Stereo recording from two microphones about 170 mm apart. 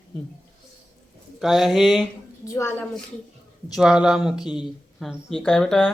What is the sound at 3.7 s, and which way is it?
A man's voice, 5° right (ahead or behind).